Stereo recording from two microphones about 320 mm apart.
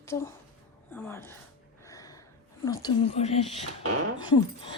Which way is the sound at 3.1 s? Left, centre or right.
Centre.